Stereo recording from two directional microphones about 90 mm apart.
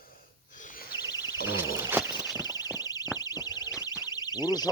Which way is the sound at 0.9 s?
50° left (ahead or behind).